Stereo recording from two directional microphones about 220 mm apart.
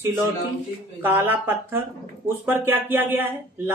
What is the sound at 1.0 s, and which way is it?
Speech, 10° right (ahead or behind).